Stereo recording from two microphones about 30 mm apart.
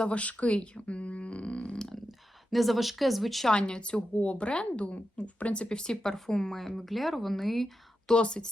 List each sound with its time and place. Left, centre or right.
0.0 s speech: left
2.5 s speech: centre
3.5 s a woman's voice: left
5.6 s speech: left
6.6 s speech: centre
8.1 s a woman's voice: left